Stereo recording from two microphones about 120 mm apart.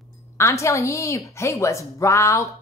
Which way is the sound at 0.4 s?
25° left (ahead or behind).